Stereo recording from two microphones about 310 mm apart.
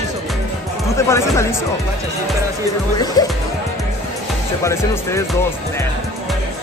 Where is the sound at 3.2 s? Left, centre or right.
Centre.